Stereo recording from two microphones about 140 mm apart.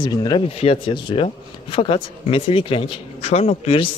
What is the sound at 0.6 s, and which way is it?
Speech, 40° left (ahead or behind).